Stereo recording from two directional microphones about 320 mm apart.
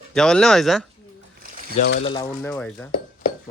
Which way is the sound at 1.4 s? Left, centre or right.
Right.